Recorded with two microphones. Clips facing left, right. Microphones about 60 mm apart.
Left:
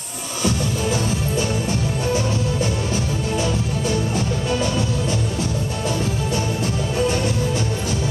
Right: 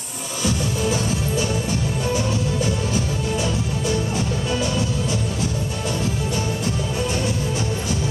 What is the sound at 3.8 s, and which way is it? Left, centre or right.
Music, centre.